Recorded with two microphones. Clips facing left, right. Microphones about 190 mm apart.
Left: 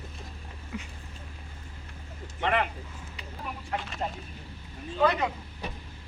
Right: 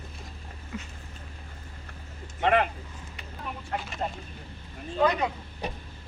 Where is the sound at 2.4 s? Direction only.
45° right (ahead or behind).